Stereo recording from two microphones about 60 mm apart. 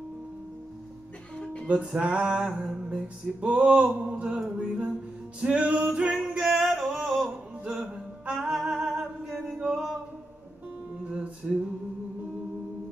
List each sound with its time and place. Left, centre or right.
1.4 s music: centre
2.0 s music: centre
6.1 s music: centre
9.0 s a capella: centre
11.1 s music: centre